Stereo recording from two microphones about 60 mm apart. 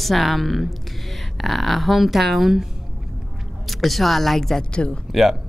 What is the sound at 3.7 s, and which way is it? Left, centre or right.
Speech, centre.